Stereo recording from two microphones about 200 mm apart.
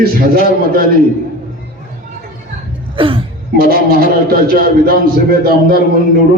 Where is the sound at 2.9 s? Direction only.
25° right (ahead or behind).